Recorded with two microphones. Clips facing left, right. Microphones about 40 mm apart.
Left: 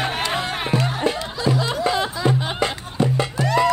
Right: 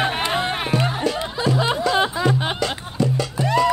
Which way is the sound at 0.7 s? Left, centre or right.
Left.